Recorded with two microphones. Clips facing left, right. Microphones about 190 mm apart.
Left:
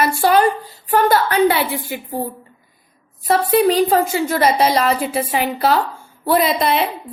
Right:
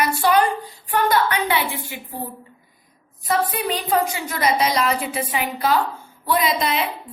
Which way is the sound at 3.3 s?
35° left (ahead or behind).